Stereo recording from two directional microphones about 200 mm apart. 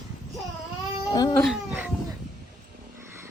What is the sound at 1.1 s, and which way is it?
Speech, 20° left (ahead or behind).